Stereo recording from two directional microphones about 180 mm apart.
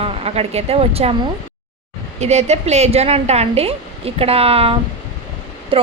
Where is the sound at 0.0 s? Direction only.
35° right (ahead or behind).